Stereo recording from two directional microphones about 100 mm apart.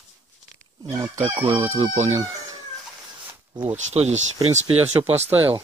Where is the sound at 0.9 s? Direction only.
30° right (ahead or behind).